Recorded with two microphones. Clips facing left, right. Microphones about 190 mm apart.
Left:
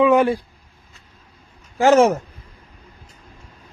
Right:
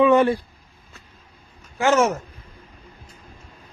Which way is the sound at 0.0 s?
10° left (ahead or behind).